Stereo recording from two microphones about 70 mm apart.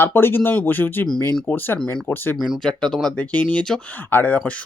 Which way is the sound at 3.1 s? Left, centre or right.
Centre.